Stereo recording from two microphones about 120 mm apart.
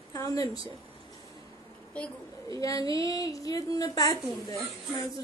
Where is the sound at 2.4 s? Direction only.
30° left (ahead or behind).